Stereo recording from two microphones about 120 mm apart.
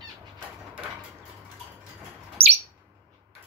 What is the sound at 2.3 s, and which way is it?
Bird, 60° right (ahead or behind).